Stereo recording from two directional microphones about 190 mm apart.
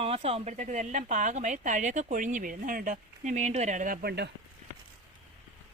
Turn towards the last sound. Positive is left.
turn(degrees=-55)  # may be behind; listen again after turning